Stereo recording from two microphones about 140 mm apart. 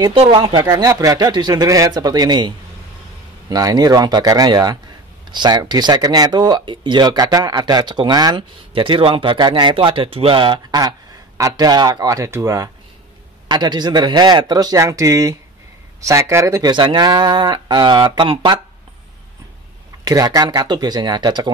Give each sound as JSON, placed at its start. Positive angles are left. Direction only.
{"t": 0.3, "sound": "speech", "side_deg": -35}
{"t": 16.7, "sound": "speech", "side_deg": -30}
{"t": 20.1, "sound": "speech", "side_deg": -25}